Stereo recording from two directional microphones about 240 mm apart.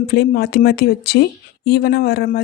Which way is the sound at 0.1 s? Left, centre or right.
Left.